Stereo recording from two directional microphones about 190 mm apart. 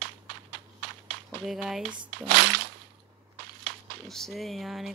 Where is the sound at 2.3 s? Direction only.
65° right (ahead or behind).